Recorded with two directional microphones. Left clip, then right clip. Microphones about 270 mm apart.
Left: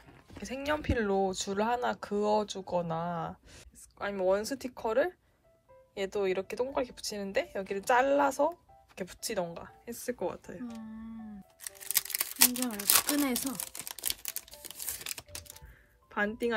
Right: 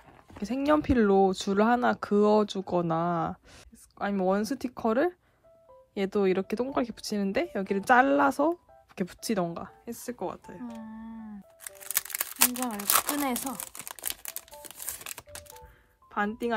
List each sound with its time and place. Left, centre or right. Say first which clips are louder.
0.3 s speech: right 7 dB; centre
11.7 s music: even; centre
13.3 s crumpling: right 2 dB; centre
16.1 s speech: right 1 dB; centre